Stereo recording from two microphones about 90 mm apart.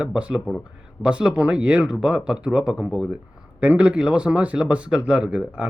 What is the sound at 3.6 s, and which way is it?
Speech, 15° right (ahead or behind).